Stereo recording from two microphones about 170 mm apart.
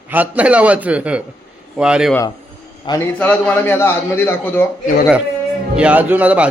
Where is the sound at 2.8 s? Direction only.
25° left (ahead or behind).